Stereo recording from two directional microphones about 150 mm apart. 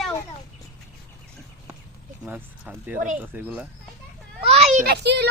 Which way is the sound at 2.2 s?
10° right (ahead or behind).